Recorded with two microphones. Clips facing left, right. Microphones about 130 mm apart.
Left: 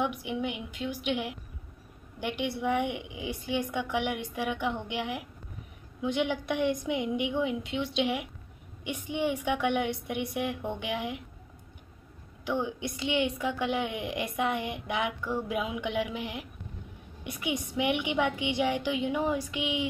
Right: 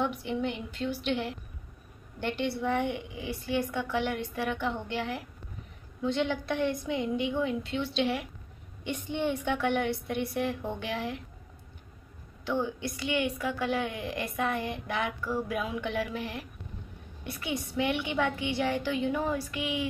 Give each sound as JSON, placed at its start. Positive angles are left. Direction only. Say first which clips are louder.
{"t": 0.0, "sound": "a woman's voice", "louder": "right 1 dB", "side_deg": 15}
{"t": 12.4, "sound": "a woman's voice", "louder": "even", "side_deg": 15}